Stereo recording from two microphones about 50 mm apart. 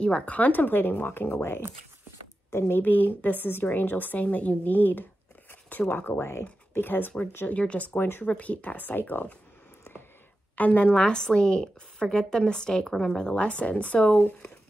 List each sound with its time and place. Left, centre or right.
0.0 s speech: left
2.8 s speech: left
6.1 s speech: left
6.7 s speech: left
7.4 s speech: left
8.0 s speech: left
8.3 s speech: left
10.5 s a woman's voice: left